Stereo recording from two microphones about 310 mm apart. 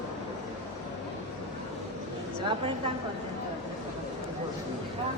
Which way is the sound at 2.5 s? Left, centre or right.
Centre.